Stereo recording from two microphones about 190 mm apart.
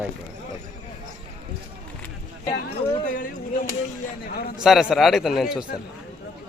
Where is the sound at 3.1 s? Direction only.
45° left (ahead or behind).